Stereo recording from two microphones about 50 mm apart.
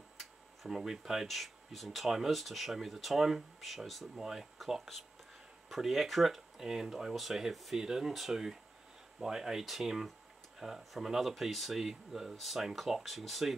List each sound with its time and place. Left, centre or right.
0.2 s speech: centre
5.7 s speech: centre